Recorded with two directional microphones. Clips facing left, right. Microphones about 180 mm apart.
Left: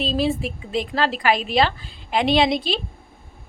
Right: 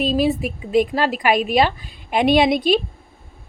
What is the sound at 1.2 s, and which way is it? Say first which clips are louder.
A woman's voice: right 3 dB; 20° right (ahead or behind).